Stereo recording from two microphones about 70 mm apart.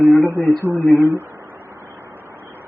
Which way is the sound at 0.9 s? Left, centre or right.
Right.